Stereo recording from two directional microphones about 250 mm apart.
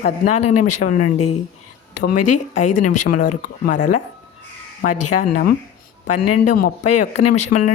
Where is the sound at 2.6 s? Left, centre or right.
Left.